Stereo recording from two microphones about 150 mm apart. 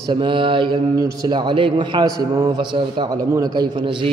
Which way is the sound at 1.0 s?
25° right (ahead or behind).